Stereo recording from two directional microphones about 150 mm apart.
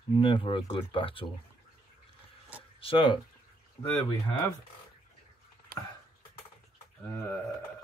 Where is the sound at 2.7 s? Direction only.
35° left (ahead or behind).